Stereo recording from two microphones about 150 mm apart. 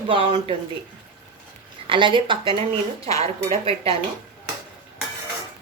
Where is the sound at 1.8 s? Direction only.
35° right (ahead or behind).